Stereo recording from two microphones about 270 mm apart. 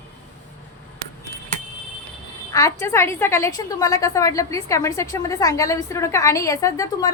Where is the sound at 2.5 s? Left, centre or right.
Centre.